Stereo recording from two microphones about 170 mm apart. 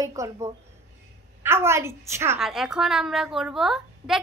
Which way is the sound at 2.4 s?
Centre (ahead or behind).